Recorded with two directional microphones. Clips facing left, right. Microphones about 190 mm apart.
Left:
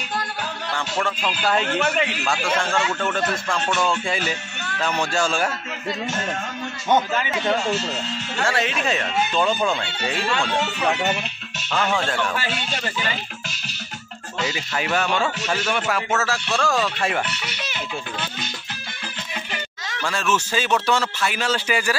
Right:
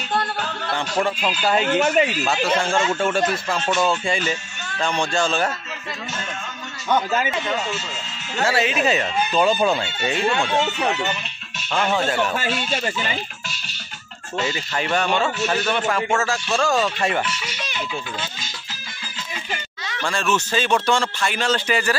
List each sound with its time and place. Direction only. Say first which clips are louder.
0.2 s music: right 3 dB; 25° right (ahead or behind)
1.2 s speech: right 2 dB; 5° right (ahead or behind)
8.5 s speech: right 4 dB; 5° right (ahead or behind)
11.7 s speech: right 2 dB; 5° right (ahead or behind)
14.5 s speech: even; 5° left (ahead or behind)
17.3 s speech: right 1 dB; 60° left (ahead or behind)
20.0 s speech: right 1 dB; 5° left (ahead or behind)